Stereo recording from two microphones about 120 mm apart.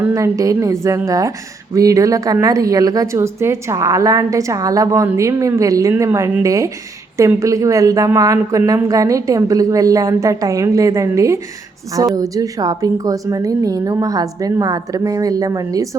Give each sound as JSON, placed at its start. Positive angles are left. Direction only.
{"t": 0.1, "sound": "a woman's voice", "side_deg": -25}